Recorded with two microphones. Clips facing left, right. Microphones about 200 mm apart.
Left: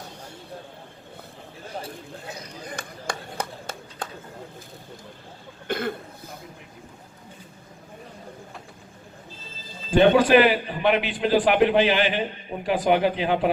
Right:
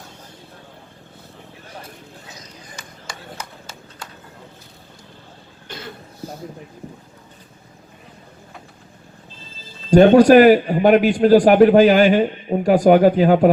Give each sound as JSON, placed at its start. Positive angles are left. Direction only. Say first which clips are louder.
{"t": 2.2, "sound": "a sound", "louder": "left 5 dB", "side_deg": 60}
{"t": 5.6, "sound": "cough", "louder": "left 9 dB", "side_deg": 55}
{"t": 9.9, "sound": "a man's voice", "louder": "right 7 dB", "side_deg": -40}